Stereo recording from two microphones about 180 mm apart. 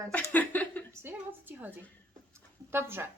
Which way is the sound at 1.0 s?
10° right (ahead or behind).